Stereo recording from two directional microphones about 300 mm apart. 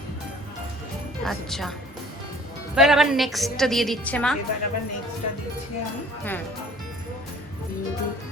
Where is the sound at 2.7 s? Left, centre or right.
Centre.